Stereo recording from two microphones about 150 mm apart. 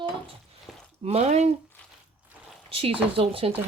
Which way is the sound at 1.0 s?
45° right (ahead or behind).